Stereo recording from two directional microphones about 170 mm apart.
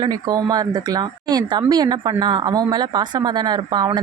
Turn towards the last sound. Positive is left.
turn(degrees=-25)  # may be behind; listen again after turning